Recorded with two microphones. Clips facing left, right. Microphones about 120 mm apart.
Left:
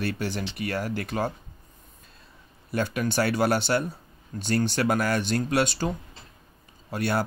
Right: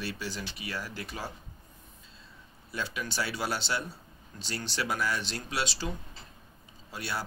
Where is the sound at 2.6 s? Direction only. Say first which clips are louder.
Left 9 dB; 55° left (ahead or behind).